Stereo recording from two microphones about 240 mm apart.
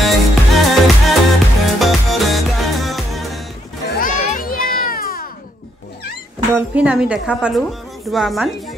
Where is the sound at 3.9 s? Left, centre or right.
Left.